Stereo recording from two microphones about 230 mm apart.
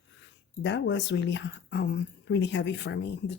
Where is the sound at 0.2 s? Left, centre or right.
Left.